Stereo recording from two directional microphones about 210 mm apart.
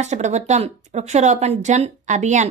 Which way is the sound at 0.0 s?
35° right (ahead or behind).